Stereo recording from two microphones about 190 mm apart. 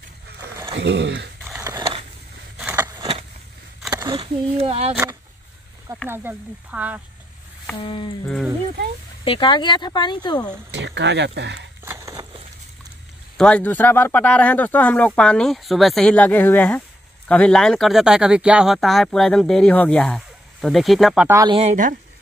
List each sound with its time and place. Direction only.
0.7 s speech: 70° right (ahead or behind)
1.5 s skateboard: 15° right (ahead or behind)
2.6 s a sound: 15° right (ahead or behind); by 4.9 s 30° right (ahead or behind)
6.0 s speech: 10° right (ahead or behind)
7.7 s speech: 25° left (ahead or behind)
9.2 s speech: 25° left (ahead or behind)
10.7 s speech: 65° right (ahead or behind)
11.8 s a sound: 15° right (ahead or behind)
13.4 s speech: 5° left (ahead or behind)
21.3 s speech: 15° right (ahead or behind)
21.5 s speech: 40° right (ahead or behind)